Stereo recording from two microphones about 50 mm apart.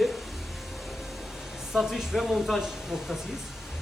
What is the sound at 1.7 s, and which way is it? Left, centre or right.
Speech, centre.